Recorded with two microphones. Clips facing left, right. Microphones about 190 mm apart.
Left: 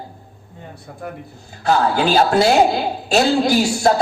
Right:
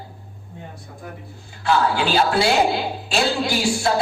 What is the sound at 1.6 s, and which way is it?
A woman's voice, 40° left (ahead or behind).